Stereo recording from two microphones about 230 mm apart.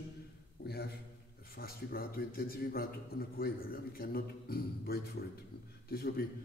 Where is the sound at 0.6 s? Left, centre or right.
Left.